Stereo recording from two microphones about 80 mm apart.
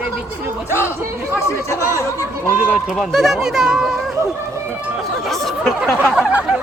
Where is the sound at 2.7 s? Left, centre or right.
Centre.